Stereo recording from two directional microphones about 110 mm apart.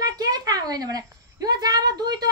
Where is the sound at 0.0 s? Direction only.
35° right (ahead or behind).